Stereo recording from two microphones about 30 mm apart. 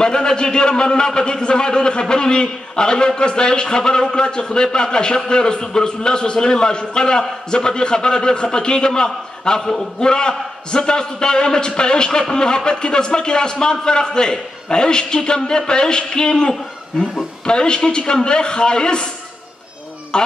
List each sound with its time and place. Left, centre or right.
0.0 s a man's voice: left
20.1 s a man's voice: left